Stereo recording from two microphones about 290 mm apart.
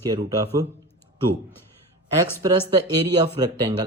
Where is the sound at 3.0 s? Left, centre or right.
Centre.